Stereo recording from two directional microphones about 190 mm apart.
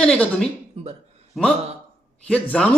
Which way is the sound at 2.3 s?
5° left (ahead or behind).